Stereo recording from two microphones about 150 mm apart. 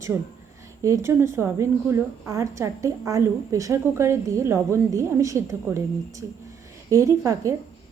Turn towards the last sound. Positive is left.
turn(degrees=-20)  # may be behind; listen again after turning